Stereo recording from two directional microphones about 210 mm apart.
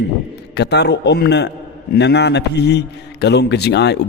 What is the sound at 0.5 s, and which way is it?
A man's voice, 55° left (ahead or behind).